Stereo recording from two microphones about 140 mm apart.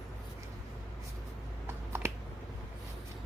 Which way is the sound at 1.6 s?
15° right (ahead or behind).